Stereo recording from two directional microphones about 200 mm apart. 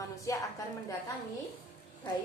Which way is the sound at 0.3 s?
15° left (ahead or behind).